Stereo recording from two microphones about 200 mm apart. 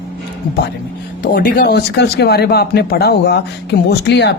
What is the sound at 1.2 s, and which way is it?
Speech, 45° left (ahead or behind).